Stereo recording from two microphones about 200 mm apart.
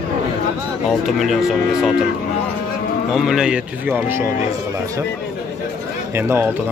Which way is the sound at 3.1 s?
Centre (ahead or behind).